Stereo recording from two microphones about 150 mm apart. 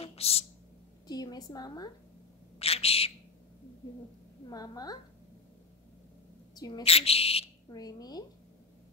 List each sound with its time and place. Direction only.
0.0 s a sound: 40° left (ahead or behind)
1.0 s a woman's voice: 25° left (ahead or behind)
2.6 s speech: 40° left (ahead or behind)
4.5 s a woman's voice: 25° left (ahead or behind)
6.5 s a woman's voice: 25° left (ahead or behind)
6.8 s speech: 40° left (ahead or behind)
7.7 s a woman's voice: 25° left (ahead or behind)